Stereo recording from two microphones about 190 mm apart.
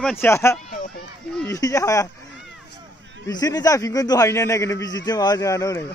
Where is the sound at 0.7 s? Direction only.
45° left (ahead or behind).